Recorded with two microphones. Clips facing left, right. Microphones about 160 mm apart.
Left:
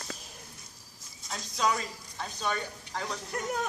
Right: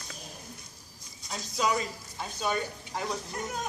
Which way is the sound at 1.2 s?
Centre (ahead or behind).